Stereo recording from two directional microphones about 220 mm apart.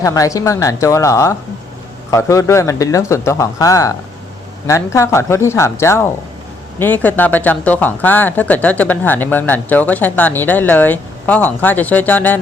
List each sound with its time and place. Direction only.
0.0 s speech: 15° left (ahead or behind)